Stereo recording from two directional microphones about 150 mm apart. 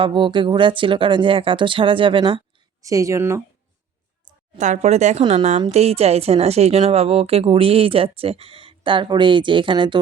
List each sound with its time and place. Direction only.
0.0 s a woman's voice: 35° right (ahead or behind)
2.8 s speech: 20° right (ahead or behind)
4.5 s a woman's voice: 55° right (ahead or behind); by 10.0 s 30° right (ahead or behind)